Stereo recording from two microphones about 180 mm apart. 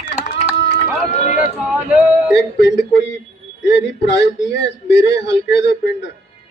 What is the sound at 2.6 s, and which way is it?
Speech, 70° left (ahead or behind).